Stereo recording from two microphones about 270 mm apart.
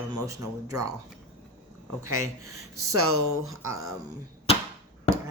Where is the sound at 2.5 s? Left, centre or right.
Right.